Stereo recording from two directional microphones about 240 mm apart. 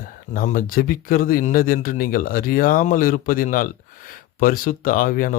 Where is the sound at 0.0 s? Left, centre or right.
Left.